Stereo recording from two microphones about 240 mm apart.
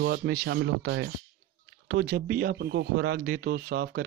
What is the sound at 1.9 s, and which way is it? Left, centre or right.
Speech, right.